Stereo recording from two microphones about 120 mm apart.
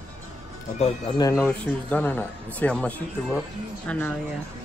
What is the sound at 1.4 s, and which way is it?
A man's voice, 10° left (ahead or behind).